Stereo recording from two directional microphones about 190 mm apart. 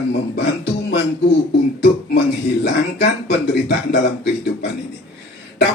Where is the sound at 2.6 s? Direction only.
65° left (ahead or behind).